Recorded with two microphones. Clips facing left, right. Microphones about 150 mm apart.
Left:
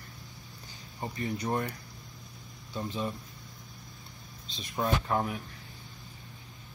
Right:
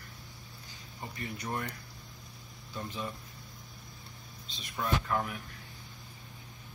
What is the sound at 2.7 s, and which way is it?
Speech, 20° left (ahead or behind).